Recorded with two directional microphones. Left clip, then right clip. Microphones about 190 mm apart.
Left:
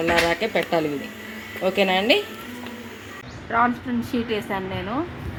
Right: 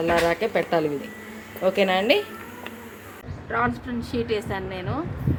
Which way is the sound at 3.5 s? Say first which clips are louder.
Left 4 dB; 25° left (ahead or behind).